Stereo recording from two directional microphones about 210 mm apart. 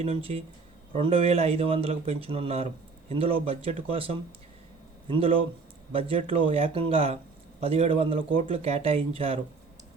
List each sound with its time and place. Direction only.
0.0 s a man's voice: 30° right (ahead or behind)